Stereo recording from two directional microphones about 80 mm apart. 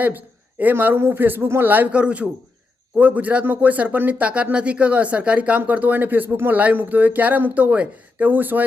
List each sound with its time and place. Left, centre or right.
0.0 s speech: right